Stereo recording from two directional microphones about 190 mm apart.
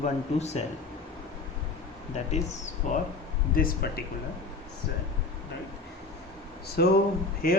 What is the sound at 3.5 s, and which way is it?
Speech, 50° left (ahead or behind).